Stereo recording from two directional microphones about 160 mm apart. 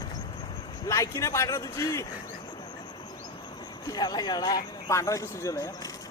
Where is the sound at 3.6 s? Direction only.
25° left (ahead or behind).